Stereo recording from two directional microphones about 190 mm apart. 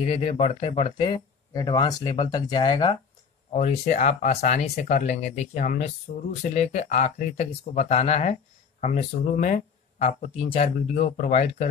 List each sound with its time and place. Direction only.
0.0 s speech: 30° left (ahead or behind)
3.5 s speech: 35° left (ahead or behind)